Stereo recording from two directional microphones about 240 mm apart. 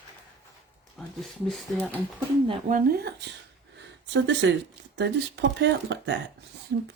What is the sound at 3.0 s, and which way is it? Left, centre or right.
Speech, right.